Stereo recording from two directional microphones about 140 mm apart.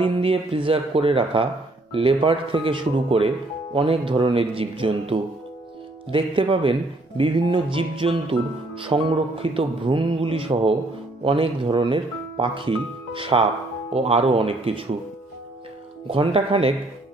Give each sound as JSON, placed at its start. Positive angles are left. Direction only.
{"t": 0.0, "sound": "speech", "side_deg": -40}
{"t": 16.1, "sound": "speech", "side_deg": -40}